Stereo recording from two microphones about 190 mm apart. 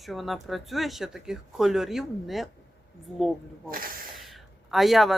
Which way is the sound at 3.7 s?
50° right (ahead or behind).